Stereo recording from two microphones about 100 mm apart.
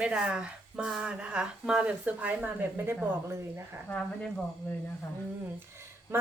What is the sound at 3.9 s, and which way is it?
Speech, 10° left (ahead or behind).